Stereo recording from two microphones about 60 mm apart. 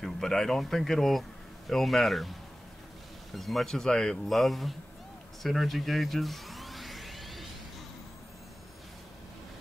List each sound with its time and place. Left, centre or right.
0.0 s speech: centre
3.3 s speech: centre
5.4 s music: centre